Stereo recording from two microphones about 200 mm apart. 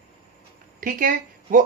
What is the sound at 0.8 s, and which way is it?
Speech, 45° right (ahead or behind).